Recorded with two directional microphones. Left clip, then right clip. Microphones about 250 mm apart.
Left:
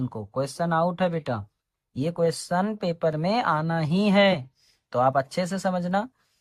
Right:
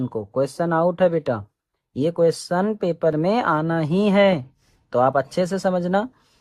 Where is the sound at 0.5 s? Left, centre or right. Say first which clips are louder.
Right 2 dB; centre.